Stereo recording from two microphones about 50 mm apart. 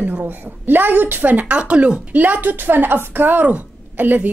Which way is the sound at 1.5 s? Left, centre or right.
Right.